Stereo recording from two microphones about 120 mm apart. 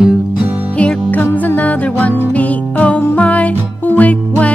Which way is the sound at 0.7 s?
15° left (ahead or behind).